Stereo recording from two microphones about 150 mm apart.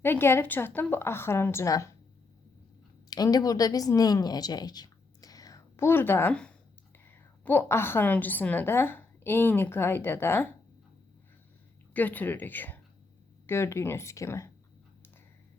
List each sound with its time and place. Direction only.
0.0 s a woman's voice: 15° left (ahead or behind)
3.1 s a woman's voice: 25° left (ahead or behind)
11.9 s a woman's voice: 10° left (ahead or behind)